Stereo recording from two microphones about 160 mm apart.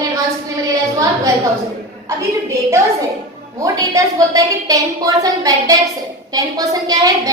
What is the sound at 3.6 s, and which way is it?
A woman's voice, 20° right (ahead or behind).